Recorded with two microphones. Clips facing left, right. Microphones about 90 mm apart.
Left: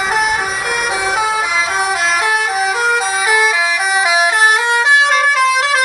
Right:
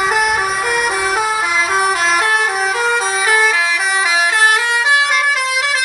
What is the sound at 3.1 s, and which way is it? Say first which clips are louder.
Vehicle horn: even; 10° left (ahead or behind).